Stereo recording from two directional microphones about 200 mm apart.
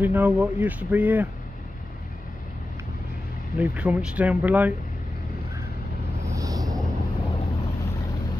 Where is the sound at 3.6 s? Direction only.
5° right (ahead or behind).